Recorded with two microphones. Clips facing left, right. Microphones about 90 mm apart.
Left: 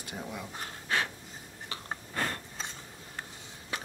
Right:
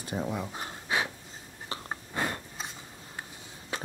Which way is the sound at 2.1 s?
15° right (ahead or behind).